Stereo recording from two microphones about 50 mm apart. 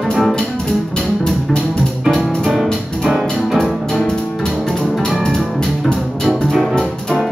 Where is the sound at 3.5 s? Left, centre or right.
Centre.